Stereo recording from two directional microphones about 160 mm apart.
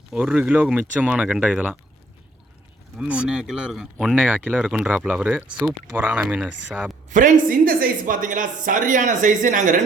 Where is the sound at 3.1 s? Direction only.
5° right (ahead or behind).